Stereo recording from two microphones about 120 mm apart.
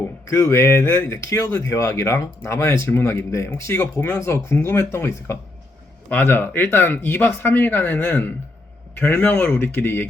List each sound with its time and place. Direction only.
0.3 s speech: 25° left (ahead or behind)